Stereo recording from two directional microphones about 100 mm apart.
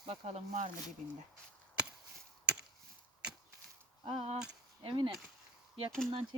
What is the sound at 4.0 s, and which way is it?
Speech, 70° right (ahead or behind).